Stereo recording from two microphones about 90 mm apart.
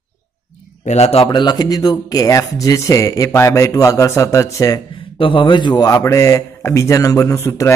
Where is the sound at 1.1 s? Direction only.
80° left.